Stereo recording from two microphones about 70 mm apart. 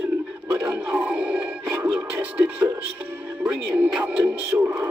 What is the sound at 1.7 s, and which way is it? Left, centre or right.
Music, right.